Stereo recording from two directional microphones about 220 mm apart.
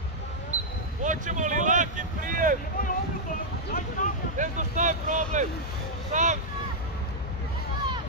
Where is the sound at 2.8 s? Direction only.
40° left (ahead or behind).